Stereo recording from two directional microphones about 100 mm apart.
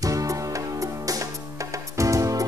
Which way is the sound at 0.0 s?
35° right (ahead or behind).